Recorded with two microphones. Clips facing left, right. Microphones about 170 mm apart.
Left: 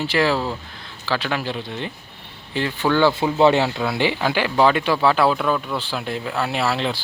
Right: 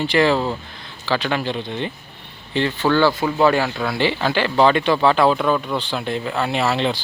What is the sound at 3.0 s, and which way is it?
Speech, 25° left (ahead or behind).